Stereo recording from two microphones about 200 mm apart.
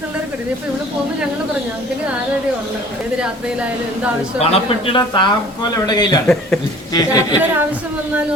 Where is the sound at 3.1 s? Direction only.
5° right (ahead or behind).